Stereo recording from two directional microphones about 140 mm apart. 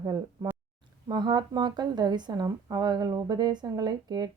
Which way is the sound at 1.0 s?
30° right (ahead or behind).